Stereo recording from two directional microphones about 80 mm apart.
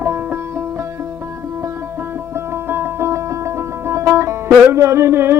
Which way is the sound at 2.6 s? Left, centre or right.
Right.